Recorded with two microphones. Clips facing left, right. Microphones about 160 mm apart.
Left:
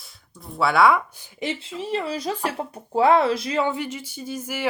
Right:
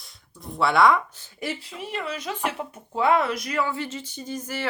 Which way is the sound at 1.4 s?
25° left (ahead or behind).